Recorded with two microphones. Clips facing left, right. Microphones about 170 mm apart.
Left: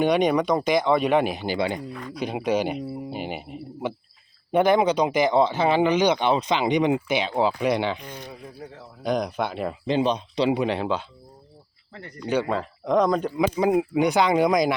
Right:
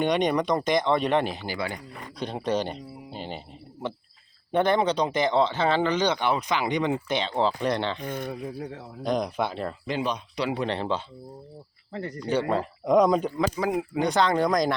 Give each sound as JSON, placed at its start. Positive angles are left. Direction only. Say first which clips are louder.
{"t": 0.0, "sound": "speech", "louder": "left 3 dB", "side_deg": 5}
{"t": 2.1, "sound": "speech", "louder": "left 3 dB", "side_deg": 10}
{"t": 8.0, "sound": "speech", "louder": "right 7 dB", "side_deg": -55}
{"t": 9.0, "sound": "speech", "louder": "left 1 dB", "side_deg": 0}
{"t": 9.8, "sound": "speech", "louder": "left 8 dB", "side_deg": 25}
{"t": 10.6, "sound": "speech", "louder": "left 3 dB", "side_deg": 5}
{"t": 11.9, "sound": "speech", "louder": "right 8 dB", "side_deg": -35}
{"t": 12.5, "sound": "speech", "louder": "right 1 dB", "side_deg": -5}
{"t": 13.6, "sound": "speech", "louder": "left 6 dB", "side_deg": 20}
{"t": 14.0, "sound": "speech", "louder": "left 1 dB", "side_deg": 10}